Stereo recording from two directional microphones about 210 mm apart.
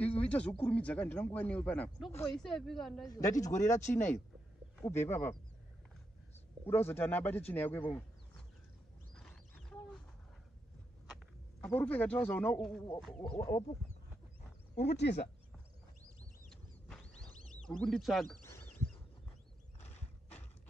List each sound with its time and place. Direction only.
0.0 s a sound: 5° left (ahead or behind)
0.7 s speech: 5° left (ahead or behind)
3.1 s speech: 15° left (ahead or behind)
6.9 s speech: 10° left (ahead or behind)
9.1 s a sound: 5° left (ahead or behind)
11.6 s speech: 5° left (ahead or behind)
13.6 s speech: 30° left (ahead or behind)
14.8 s speech: 50° left (ahead or behind)
16.4 s mechanisms: 5° left (ahead or behind)
17.5 s speech: 5° left (ahead or behind)
18.4 s a sound: 10° left (ahead or behind)